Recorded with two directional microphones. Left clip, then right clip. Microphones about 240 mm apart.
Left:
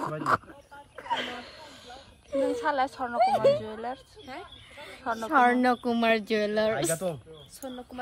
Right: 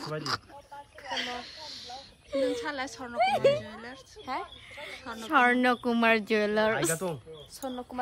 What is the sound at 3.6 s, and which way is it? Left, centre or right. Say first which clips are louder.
Speech: left 8 dB; centre.